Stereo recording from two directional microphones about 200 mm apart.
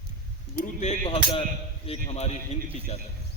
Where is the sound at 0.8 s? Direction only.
30° left (ahead or behind).